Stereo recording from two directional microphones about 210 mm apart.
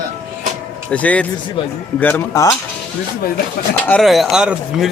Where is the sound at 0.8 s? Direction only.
5° left (ahead or behind).